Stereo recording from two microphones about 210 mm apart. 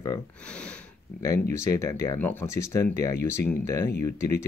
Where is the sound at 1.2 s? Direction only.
15° left (ahead or behind).